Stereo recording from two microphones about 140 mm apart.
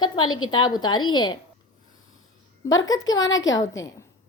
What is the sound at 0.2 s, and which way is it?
A woman's voice, 30° left (ahead or behind).